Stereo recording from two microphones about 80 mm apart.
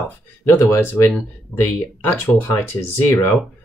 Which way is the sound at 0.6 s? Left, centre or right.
Left.